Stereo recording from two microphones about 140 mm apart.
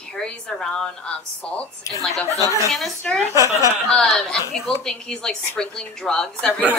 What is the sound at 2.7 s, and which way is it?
A woman's voice, 5° left (ahead or behind).